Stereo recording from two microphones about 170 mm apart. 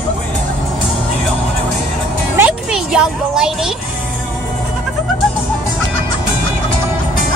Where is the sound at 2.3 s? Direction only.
5° right (ahead or behind).